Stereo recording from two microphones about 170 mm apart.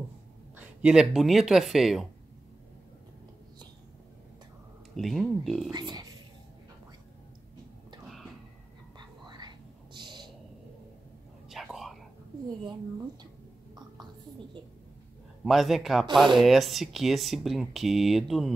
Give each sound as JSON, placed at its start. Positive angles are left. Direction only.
{"t": 0.6, "sound": "speech", "side_deg": -5}
{"t": 4.9, "sound": "speech", "side_deg": 0}
{"t": 5.7, "sound": "speech", "side_deg": -25}
{"t": 8.9, "sound": "a sound", "side_deg": -25}
{"t": 11.4, "sound": "whispering", "side_deg": 0}
{"t": 15.4, "sound": "speech", "side_deg": 0}